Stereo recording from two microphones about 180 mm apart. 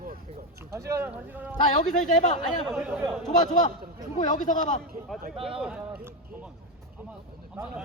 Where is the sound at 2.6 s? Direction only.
5° right (ahead or behind).